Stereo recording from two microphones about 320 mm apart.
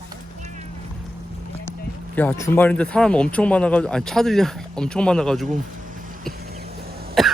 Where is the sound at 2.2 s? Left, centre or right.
Centre.